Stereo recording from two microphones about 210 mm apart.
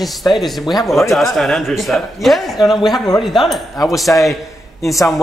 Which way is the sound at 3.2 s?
Centre (ahead or behind).